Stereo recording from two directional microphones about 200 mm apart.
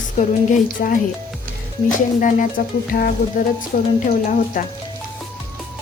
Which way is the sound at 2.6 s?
45° left (ahead or behind).